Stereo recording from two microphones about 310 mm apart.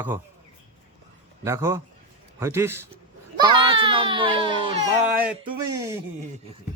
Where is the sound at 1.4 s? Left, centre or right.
Centre.